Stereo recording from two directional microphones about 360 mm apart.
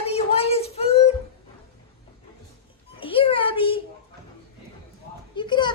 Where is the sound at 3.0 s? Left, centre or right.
Centre.